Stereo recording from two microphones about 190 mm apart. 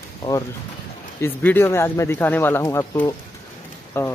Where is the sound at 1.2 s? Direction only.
10° left (ahead or behind).